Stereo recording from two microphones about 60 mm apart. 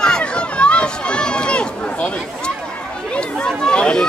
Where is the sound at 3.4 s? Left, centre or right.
Centre.